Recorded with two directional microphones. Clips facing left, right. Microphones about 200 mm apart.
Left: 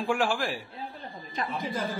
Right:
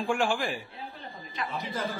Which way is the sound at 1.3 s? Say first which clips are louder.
Left 3 dB; 45° left (ahead or behind).